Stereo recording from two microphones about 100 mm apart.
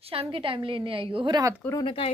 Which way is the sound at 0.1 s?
65° right (ahead or behind).